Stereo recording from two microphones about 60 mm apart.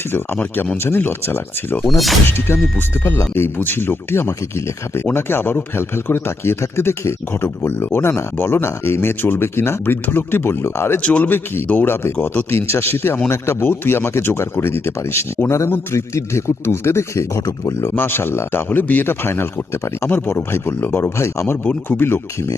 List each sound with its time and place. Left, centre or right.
0.9 s speech: left
1.8 s speech: centre
2.2 s speech: left
11.0 s a man's voice: left
11.3 s speech: left
12.2 s a man's voice: left
12.5 s speech: left
17.9 s speech: left
20.1 s speech: left
21.6 s speech: left